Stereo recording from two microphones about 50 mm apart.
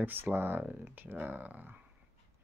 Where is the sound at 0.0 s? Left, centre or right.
Right.